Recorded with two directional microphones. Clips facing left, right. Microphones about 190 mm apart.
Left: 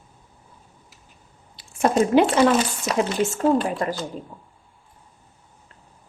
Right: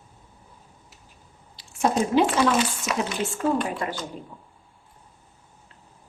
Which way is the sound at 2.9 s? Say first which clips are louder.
Left 5 dB; 40° left (ahead or behind).